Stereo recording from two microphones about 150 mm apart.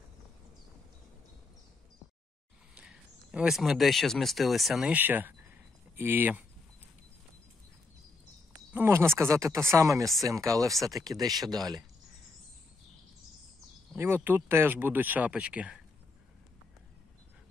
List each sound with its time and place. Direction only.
2.7 s speech: 5° right (ahead or behind)
8.7 s speech: 15° right (ahead or behind)
13.9 s speech: 15° right (ahead or behind)